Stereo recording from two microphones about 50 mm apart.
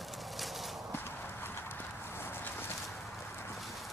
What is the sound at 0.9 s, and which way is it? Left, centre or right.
Clip-clop, left.